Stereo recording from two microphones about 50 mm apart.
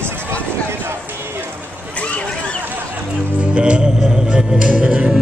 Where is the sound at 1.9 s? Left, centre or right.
Left.